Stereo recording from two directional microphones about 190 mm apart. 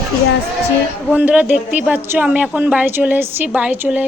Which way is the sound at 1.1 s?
5° right (ahead or behind).